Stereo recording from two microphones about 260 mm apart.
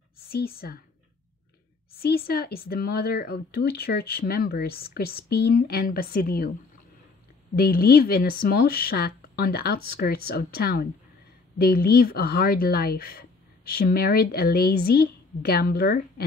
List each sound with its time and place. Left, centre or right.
0.3 s speech: left
2.0 s speech: left
7.5 s speech: left